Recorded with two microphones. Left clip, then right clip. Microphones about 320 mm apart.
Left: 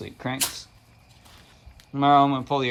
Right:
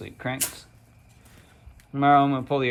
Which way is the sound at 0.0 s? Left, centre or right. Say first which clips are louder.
Even; centre.